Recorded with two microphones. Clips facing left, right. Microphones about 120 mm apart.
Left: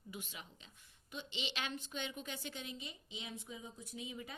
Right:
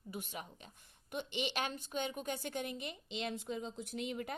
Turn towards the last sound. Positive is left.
turn(degrees=-65)  # may be behind; listen again after turning